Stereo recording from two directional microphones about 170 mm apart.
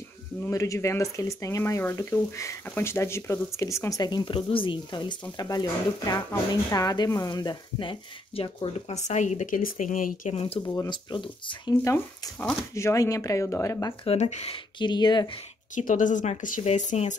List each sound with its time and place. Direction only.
0.5 s speech: 20° left (ahead or behind); by 10.7 s 35° left (ahead or behind)
10.7 s speech: 20° left (ahead or behind)
11.7 s speech: 15° left (ahead or behind)
14.0 s speech: 35° left (ahead or behind)
15.7 s speech: 50° left (ahead or behind)